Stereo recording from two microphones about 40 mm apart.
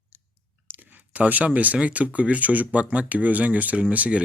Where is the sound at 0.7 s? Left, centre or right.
Right.